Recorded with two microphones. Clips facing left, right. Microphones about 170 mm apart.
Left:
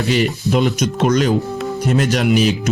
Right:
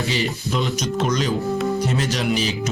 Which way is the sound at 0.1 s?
60° left (ahead or behind).